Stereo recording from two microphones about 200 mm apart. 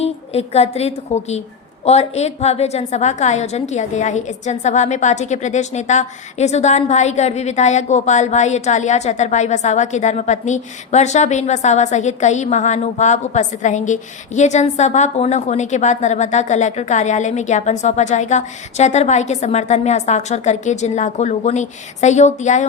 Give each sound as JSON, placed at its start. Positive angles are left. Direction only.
{"t": 0.0, "sound": "a woman's voice", "side_deg": 30}